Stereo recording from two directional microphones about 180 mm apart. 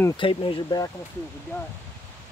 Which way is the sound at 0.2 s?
30° left (ahead or behind).